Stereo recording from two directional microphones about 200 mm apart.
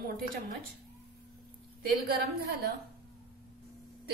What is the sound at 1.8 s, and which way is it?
Speech, 50° right (ahead or behind).